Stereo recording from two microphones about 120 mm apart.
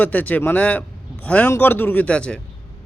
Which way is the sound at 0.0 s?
15° left (ahead or behind).